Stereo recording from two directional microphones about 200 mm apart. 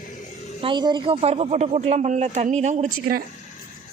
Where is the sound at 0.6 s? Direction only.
25° right (ahead or behind).